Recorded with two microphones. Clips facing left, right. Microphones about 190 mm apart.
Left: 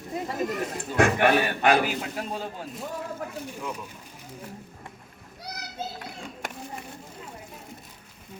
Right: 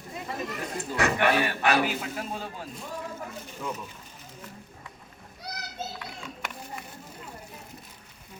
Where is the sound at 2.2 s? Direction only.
40° left (ahead or behind).